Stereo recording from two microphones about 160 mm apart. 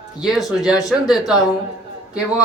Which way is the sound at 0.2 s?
Centre (ahead or behind).